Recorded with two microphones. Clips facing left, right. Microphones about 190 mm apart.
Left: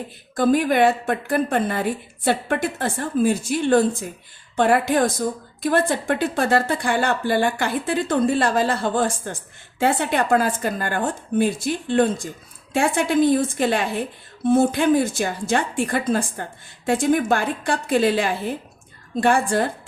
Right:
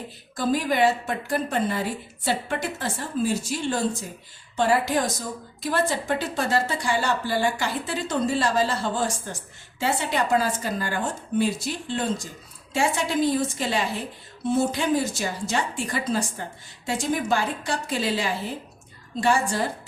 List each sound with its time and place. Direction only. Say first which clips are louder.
0.3 s a woman's voice: left 5 dB; 55° left (ahead or behind)